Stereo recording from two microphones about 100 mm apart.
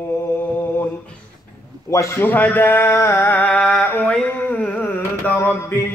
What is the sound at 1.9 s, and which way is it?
A man's voice, 30° left (ahead or behind).